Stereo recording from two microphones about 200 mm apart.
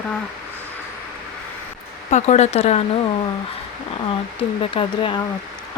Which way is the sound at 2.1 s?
35° left (ahead or behind).